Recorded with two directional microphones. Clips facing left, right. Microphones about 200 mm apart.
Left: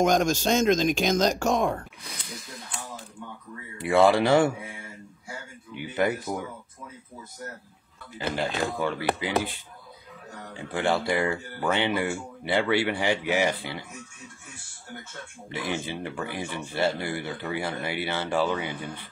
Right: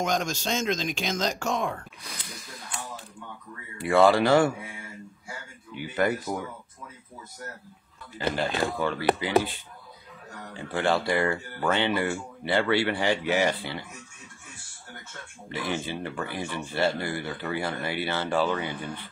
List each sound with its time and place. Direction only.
0.0 s speech: 50° left (ahead or behind)
2.0 s a sound: centre (ahead or behind)
3.7 s speech: 20° left (ahead or behind)
5.8 s speech: 20° left (ahead or behind)
8.4 s speech: 15° left (ahead or behind)
10.5 s speech: 15° left (ahead or behind)
15.5 s speech: 15° left (ahead or behind)